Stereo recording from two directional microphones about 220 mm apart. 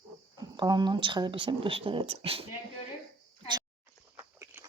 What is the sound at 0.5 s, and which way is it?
Speech, 20° right (ahead or behind).